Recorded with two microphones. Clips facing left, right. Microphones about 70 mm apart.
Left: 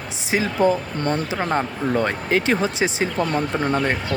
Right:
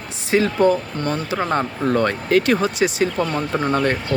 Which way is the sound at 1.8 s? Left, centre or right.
Centre.